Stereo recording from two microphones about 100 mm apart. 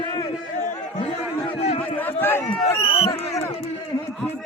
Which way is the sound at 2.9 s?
70° left (ahead or behind).